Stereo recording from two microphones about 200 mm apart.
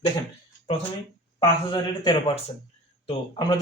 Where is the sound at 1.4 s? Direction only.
25° left (ahead or behind).